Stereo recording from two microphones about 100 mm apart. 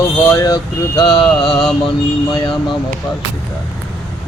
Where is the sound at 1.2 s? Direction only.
5° left (ahead or behind).